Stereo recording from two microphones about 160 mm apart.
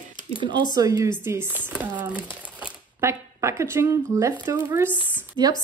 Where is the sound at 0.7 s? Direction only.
20° right (ahead or behind).